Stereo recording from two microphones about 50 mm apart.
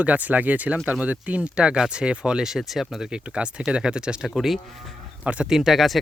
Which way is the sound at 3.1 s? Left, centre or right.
Centre.